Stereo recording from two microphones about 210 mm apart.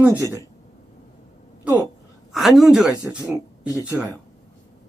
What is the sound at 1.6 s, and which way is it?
A woman's voice, 5° right (ahead or behind).